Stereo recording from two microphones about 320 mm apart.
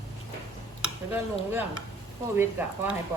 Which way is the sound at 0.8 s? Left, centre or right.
Centre.